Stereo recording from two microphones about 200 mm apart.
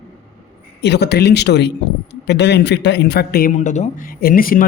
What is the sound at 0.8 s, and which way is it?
Speech, 55° left (ahead or behind).